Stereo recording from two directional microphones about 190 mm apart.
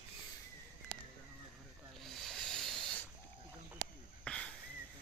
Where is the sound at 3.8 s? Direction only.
45° right (ahead or behind).